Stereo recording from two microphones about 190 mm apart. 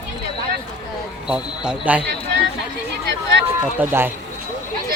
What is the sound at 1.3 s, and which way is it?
Speech, 5° right (ahead or behind).